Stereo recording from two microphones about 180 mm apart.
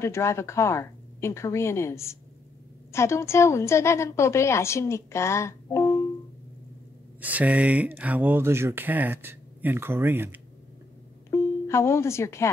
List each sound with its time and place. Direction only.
0.0 s a woman's voice: 15° left (ahead or behind)
7.2 s speech: 10° right (ahead or behind)
11.2 s speech: 15° left (ahead or behind)